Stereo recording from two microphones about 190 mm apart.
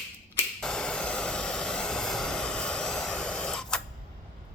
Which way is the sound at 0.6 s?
5° left (ahead or behind).